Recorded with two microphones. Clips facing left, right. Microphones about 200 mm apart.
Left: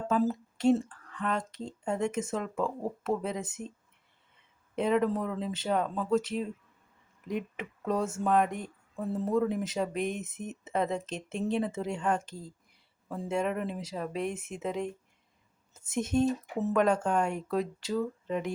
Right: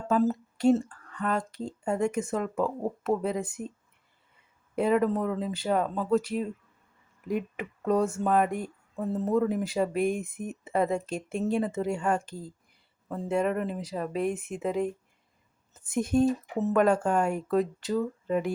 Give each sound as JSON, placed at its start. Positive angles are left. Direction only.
{"t": 0.1, "sound": "speech", "side_deg": 0}
{"t": 4.7, "sound": "speech", "side_deg": -5}
{"t": 16.0, "sound": "speech", "side_deg": 0}